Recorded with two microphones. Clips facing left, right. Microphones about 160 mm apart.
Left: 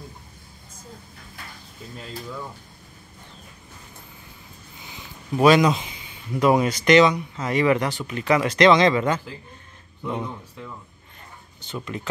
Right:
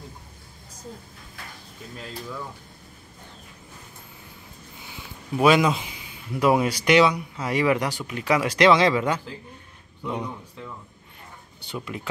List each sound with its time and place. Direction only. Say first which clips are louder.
4.8 s speech: left 1 dB; 5° right (ahead or behind)
11.6 s speech: left 1 dB; 10° right (ahead or behind)